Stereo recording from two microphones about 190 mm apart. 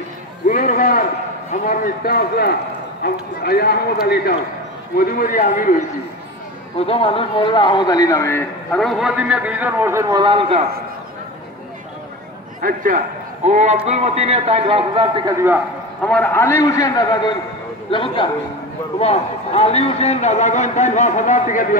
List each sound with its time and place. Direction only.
0.5 s a man's voice: 45° left (ahead or behind)
4.9 s a man's voice: 45° left (ahead or behind)
6.9 s a man's voice: 30° left (ahead or behind); by 10.6 s 25° right (ahead or behind)
12.6 s a man's voice: 45° right (ahead or behind); by 15.3 s 25° right (ahead or behind)
16.1 s a man's voice: 10° left (ahead or behind); by 21.6 s 40° left (ahead or behind)